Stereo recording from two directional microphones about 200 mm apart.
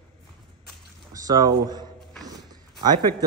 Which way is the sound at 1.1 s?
20° right (ahead or behind).